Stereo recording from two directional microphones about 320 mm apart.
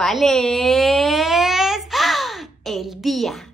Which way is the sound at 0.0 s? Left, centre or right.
Centre.